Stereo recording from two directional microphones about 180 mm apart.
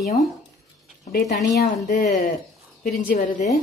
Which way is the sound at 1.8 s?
45° left (ahead or behind).